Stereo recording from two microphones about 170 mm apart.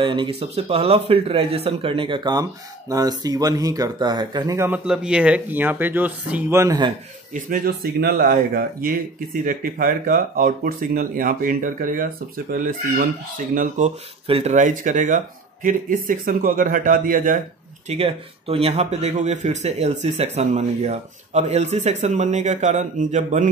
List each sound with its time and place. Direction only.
0.0 s speech: 30° right (ahead or behind)
7.3 s speech: 55° right (ahead or behind)
14.2 s speech: 35° right (ahead or behind); by 17.4 s 55° right (ahead or behind)
17.8 s speech: 35° right (ahead or behind)